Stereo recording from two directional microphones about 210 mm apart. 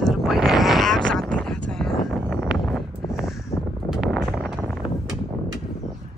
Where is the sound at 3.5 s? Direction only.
30° left (ahead or behind).